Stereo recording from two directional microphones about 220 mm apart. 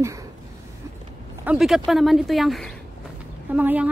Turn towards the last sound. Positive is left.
turn(degrees=-5)  # may be behind; listen again after turning